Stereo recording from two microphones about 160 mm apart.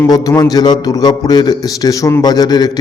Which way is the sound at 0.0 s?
25° left (ahead or behind).